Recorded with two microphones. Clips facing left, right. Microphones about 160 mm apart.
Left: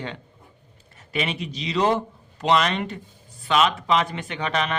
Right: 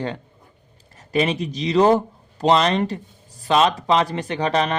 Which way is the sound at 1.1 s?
40° right (ahead or behind).